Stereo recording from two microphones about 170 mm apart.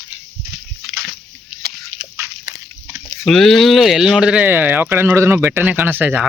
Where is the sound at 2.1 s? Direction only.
15° right (ahead or behind).